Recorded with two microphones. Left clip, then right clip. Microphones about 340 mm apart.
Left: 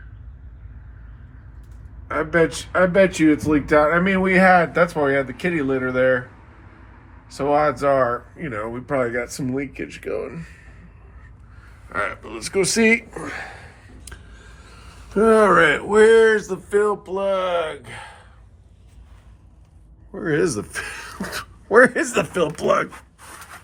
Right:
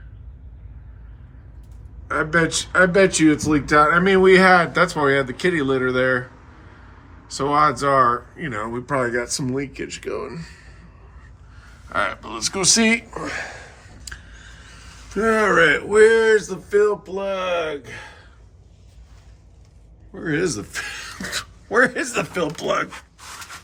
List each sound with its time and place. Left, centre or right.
2.0 s speech: centre
7.3 s speech: centre
11.9 s speech: centre
14.7 s speech: centre
17.1 s speech: left
20.1 s speech: centre